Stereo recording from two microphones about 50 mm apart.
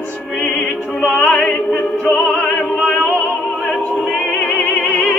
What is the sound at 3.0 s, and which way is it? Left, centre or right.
Opera, centre.